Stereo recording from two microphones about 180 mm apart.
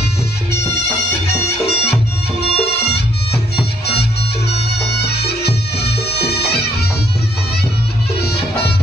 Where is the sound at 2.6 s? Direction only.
65° left (ahead or behind).